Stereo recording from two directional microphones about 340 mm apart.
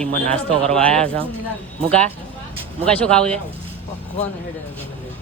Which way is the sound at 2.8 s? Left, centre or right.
Centre.